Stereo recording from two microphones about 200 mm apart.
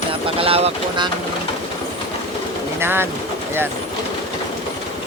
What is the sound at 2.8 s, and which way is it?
Speech, 10° right (ahead or behind).